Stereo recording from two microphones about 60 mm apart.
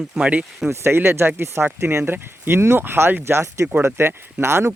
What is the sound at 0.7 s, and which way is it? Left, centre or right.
Speech, right.